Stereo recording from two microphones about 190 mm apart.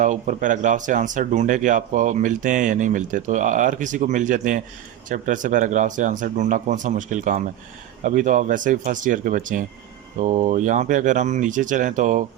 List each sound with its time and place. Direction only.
0.0 s speech: 40° right (ahead or behind)